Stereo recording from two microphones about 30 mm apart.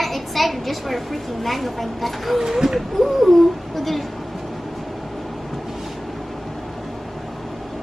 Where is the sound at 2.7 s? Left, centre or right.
Centre.